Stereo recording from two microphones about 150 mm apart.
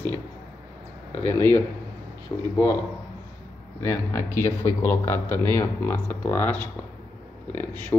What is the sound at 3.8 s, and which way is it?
Speech, 15° left (ahead or behind).